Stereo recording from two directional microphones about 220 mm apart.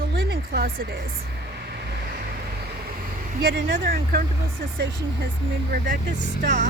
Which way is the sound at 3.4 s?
45° right (ahead or behind).